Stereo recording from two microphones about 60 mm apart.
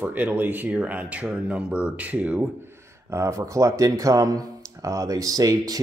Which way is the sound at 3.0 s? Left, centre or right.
Right.